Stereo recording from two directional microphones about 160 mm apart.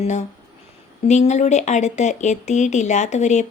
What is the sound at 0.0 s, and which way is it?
Speech, 45° left (ahead or behind).